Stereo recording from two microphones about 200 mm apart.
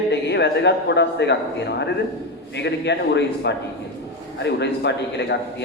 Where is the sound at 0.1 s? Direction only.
60° left (ahead or behind).